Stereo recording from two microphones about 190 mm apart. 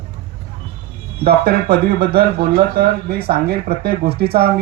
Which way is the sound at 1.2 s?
55° right (ahead or behind).